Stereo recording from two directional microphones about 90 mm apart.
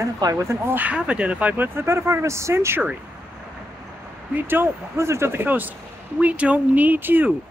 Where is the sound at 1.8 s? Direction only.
30° right (ahead or behind).